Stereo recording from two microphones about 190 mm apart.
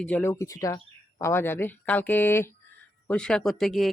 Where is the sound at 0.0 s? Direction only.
10° left (ahead or behind).